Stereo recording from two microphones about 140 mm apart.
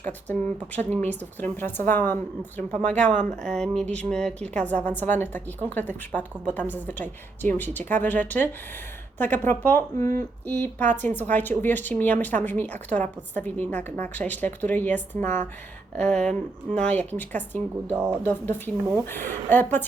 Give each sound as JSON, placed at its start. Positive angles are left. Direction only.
{"t": 0.0, "sound": "a woman's voice", "side_deg": 10}
{"t": 17.9, "sound": "speech", "side_deg": -15}
{"t": 18.2, "sound": "a woman's voice", "side_deg": 15}